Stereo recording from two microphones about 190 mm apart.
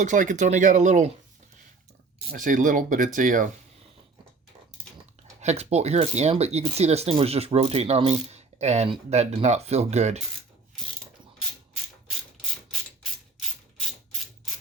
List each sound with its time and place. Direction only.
0.0 s speech: 40° right (ahead or behind)
2.3 s speech: 45° right (ahead or behind)
5.4 s speech: 35° right (ahead or behind)